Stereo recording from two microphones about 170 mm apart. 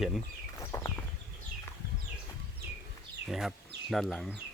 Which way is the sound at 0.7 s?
15° left (ahead or behind).